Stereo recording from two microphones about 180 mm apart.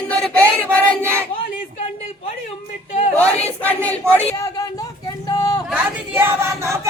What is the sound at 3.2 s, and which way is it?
Speech, 10° left (ahead or behind).